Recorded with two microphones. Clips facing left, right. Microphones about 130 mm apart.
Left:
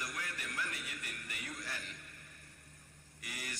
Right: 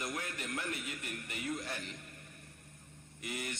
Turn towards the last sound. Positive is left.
turn(degrees=-25)  # may be behind; listen again after turning